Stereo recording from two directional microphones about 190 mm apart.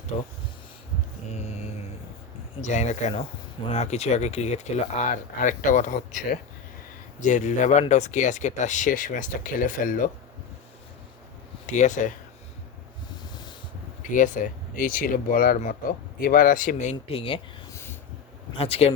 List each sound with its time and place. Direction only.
0.1 s speech: 35° left (ahead or behind)
2.6 s speech: 40° left (ahead or behind)
7.3 s speech: 40° left (ahead or behind)
11.6 s speech: 40° left (ahead or behind)
14.1 s speech: 45° left (ahead or behind)
18.5 s speech: 30° left (ahead or behind)